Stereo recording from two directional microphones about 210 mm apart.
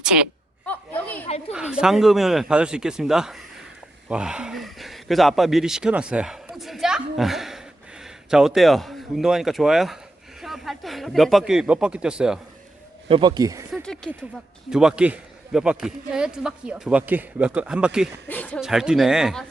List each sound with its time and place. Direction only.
0.0 s a woman's voice: 5° right (ahead or behind)
0.6 s a sound: 5° left (ahead or behind)
1.5 s a man's voice: 5° right (ahead or behind)
13.1 s speech: 25° right (ahead or behind)
13.7 s a man's voice: centre (ahead or behind)
18.3 s a man's voice: 5° left (ahead or behind)